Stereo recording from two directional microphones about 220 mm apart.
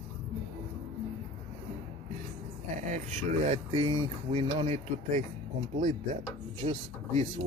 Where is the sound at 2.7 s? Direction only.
35° right (ahead or behind).